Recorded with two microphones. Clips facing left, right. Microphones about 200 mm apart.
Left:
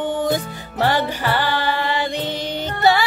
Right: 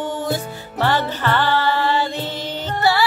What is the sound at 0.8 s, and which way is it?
Music, 10° left (ahead or behind).